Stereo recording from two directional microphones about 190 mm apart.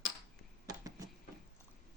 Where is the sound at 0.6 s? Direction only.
20° right (ahead or behind).